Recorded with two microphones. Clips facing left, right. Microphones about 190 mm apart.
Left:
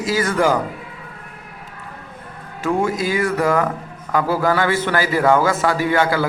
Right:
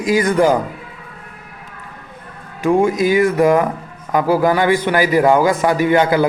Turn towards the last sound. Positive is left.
turn(degrees=-20)  # may be behind; listen again after turning